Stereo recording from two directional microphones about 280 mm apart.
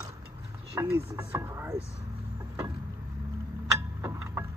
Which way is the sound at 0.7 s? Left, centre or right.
Centre.